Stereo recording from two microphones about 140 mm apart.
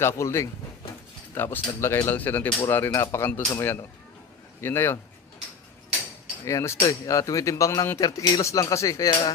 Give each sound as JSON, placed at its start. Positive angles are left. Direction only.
{"t": 0.0, "sound": "speech", "side_deg": 20}
{"t": 6.4, "sound": "speech", "side_deg": 20}